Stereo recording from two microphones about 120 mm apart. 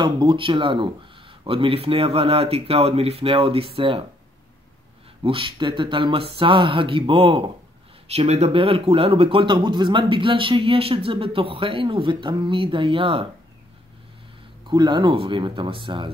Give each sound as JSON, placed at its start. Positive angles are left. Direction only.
{"t": 0.0, "sound": "speech", "side_deg": -40}
{"t": 5.2, "sound": "speech", "side_deg": -50}
{"t": 8.1, "sound": "speech", "side_deg": -60}
{"t": 14.7, "sound": "speech", "side_deg": -40}